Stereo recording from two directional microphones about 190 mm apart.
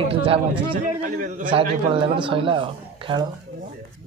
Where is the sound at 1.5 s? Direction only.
30° right (ahead or behind).